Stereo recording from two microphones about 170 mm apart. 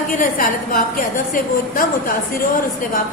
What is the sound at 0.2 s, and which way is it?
A woman's voice, 55° left (ahead or behind).